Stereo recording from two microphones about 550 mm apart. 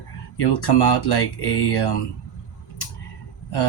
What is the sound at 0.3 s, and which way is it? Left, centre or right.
Speech, left.